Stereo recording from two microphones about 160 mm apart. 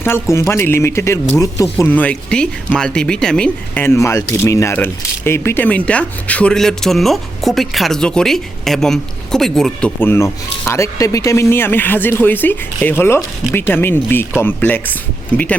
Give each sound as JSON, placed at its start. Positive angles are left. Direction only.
{"t": 0.0, "sound": "speech", "side_deg": 15}
{"t": 10.0, "sound": "speech", "side_deg": 15}